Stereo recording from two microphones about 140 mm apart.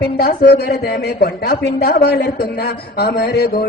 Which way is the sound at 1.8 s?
90° left.